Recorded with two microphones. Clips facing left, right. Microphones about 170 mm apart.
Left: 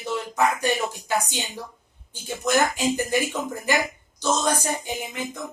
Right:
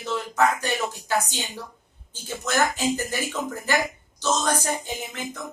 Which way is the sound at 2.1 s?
15° left (ahead or behind).